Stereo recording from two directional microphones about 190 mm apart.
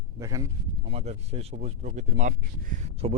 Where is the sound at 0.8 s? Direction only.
35° right (ahead or behind).